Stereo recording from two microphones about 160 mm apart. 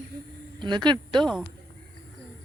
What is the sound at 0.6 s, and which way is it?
Speech, 30° right (ahead or behind).